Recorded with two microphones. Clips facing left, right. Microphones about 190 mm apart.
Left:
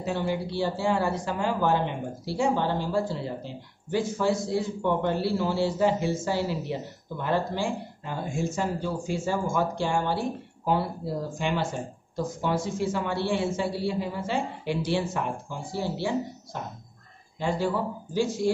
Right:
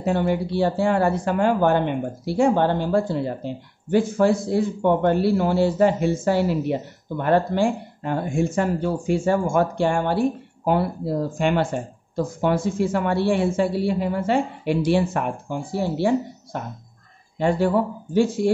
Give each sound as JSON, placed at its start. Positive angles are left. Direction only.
{"t": 0.0, "sound": "speech", "side_deg": -60}